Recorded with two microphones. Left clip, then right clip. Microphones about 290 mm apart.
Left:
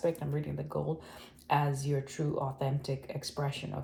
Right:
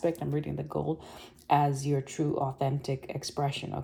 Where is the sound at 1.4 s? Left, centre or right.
Right.